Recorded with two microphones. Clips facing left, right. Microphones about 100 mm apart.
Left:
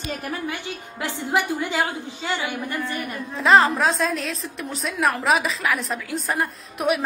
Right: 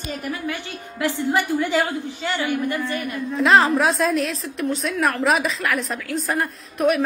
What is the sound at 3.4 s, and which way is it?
A woman's voice, centre (ahead or behind).